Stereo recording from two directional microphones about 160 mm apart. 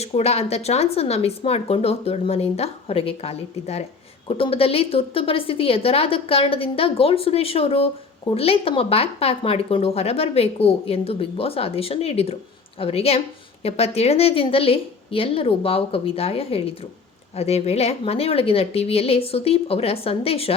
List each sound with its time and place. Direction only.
0.0 s speech: 40° left (ahead or behind)